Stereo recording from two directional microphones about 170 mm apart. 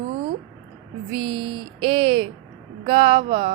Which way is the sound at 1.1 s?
30° right (ahead or behind).